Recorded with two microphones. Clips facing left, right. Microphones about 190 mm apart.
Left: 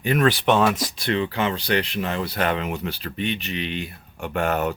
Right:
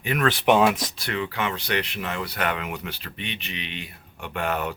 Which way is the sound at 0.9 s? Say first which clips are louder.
Left 5 dB; 30° left (ahead or behind).